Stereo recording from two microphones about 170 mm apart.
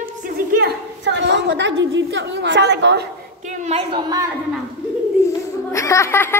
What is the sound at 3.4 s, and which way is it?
Speech, 40° right (ahead or behind).